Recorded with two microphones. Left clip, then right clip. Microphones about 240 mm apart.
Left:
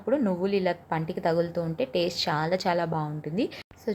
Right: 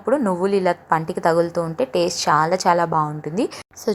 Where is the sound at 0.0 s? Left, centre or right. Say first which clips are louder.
Right 7 dB; centre.